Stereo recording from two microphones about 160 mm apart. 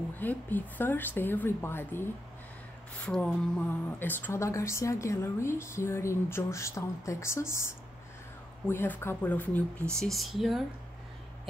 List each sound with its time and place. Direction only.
0.2 s speech: 10° left (ahead or behind)
3.1 s speech: 5° left (ahead or behind)